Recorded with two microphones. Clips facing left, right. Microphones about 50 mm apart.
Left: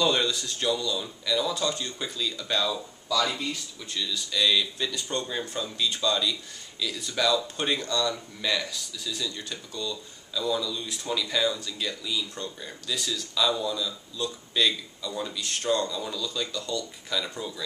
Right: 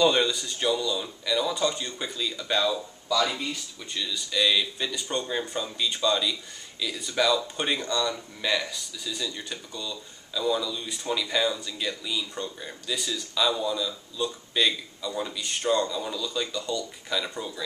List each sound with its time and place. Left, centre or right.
0.0 s speech: centre